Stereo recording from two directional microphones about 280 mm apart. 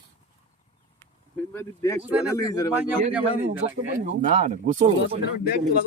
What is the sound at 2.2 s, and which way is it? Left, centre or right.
Speech, centre.